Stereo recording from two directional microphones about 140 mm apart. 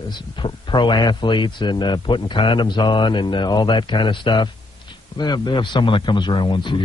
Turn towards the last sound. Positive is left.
turn(degrees=35)  # may be behind; listen again after turning